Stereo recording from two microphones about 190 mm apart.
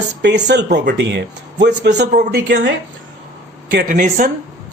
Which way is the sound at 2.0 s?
40° right (ahead or behind).